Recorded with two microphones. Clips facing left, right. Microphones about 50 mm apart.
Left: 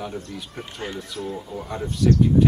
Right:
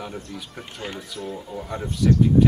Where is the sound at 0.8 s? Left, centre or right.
Left.